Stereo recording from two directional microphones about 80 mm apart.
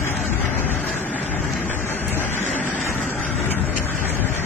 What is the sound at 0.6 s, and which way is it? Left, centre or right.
Vehicle, left.